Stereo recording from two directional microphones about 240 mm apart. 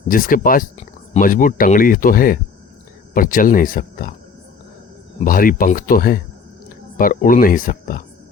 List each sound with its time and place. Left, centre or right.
0.1 s speech: left
5.2 s speech: left